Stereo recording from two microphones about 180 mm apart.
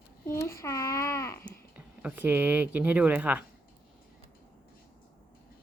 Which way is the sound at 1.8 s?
10° right (ahead or behind).